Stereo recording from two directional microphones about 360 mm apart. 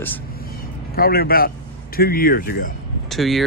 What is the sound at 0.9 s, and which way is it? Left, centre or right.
Speech, left.